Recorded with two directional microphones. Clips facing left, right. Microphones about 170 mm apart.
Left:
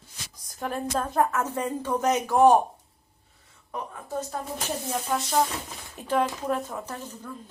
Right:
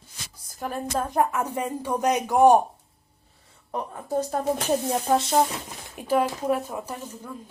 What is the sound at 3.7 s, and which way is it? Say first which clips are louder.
Speech: right 5 dB; 40° right (ahead or behind).